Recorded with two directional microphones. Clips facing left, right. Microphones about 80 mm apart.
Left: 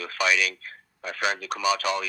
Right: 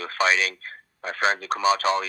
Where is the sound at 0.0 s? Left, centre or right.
Right.